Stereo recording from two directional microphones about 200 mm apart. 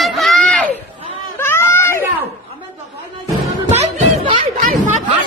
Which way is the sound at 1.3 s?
10° left (ahead or behind).